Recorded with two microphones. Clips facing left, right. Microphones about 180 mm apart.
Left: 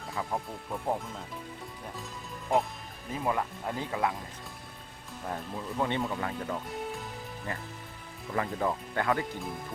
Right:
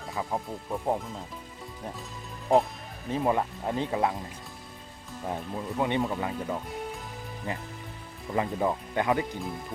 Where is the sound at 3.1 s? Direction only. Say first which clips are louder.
Right 4 dB; 25° right (ahead or behind).